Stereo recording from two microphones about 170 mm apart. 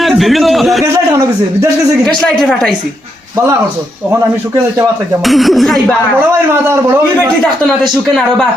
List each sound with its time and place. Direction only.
0.0 s a man's voice: centre (ahead or behind)
2.0 s speech: 5° left (ahead or behind)
5.2 s speech: centre (ahead or behind)
6.7 s a man's voice: 15° right (ahead or behind)